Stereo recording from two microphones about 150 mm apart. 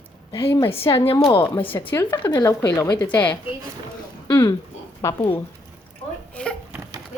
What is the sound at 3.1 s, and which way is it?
Speech, 10° left (ahead or behind).